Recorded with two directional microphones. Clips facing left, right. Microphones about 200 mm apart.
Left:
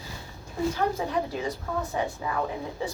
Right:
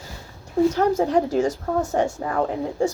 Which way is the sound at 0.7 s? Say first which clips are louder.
Right 8 dB; 45° right (ahead or behind).